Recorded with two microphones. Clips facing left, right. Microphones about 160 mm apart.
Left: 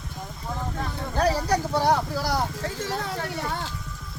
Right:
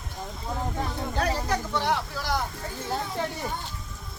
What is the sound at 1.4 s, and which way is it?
Speech, 40° left (ahead or behind).